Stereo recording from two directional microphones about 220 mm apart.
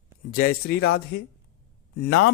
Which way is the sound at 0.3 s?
40° left (ahead or behind).